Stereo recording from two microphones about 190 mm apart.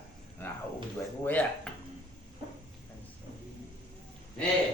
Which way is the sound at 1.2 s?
10° left (ahead or behind).